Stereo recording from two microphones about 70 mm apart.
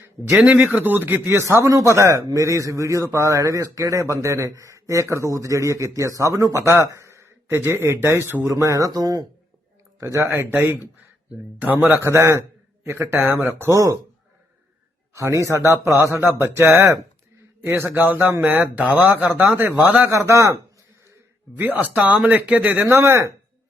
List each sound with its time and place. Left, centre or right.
0.3 s speech: centre
1.3 s a man's voice: right
8.4 s speech: right
10.0 s speech: right
12.0 s a man's voice: right
15.1 s a man's voice: right
20.1 s a man's voice: right
21.6 s speech: right
23.0 s a man's voice: right